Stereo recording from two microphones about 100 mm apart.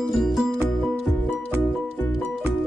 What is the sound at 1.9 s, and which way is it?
Music, 20° left (ahead or behind).